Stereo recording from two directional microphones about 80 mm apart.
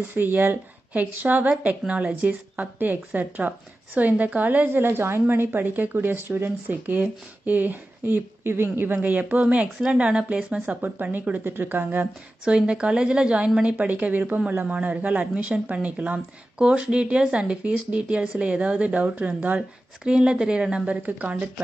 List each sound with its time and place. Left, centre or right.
0.1 s speech: right
12.4 s speech: centre
20.0 s speech: centre